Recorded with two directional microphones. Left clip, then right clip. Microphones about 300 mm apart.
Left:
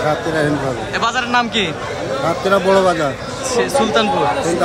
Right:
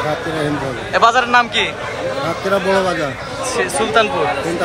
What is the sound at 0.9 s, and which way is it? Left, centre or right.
Speech, centre.